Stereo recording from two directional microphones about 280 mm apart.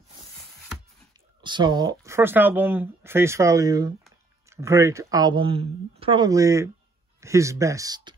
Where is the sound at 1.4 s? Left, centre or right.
Centre.